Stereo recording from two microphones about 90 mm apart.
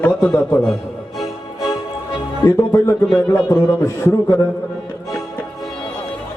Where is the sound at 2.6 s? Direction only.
35° left (ahead or behind).